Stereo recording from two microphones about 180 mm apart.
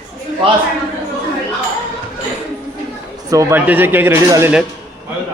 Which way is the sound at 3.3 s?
15° right (ahead or behind).